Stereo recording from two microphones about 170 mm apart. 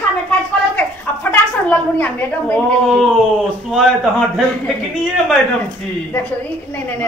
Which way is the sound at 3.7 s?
Centre (ahead or behind).